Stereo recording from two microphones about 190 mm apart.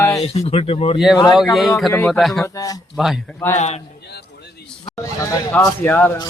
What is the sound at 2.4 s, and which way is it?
Speech, 20° left (ahead or behind).